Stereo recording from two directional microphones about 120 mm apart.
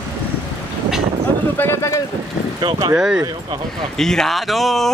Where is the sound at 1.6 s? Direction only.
20° left (ahead or behind).